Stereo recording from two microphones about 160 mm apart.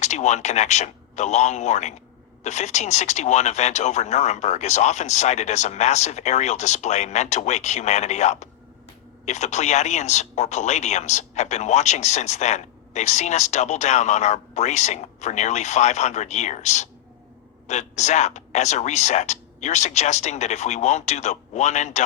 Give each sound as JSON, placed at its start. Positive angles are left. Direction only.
{"t": 0.0, "sound": "speech", "side_deg": 45}